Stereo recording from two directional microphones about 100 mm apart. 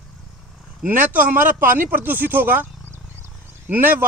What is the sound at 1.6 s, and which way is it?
Speech, 20° right (ahead or behind).